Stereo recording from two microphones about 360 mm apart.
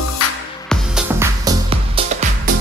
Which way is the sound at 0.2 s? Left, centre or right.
Left.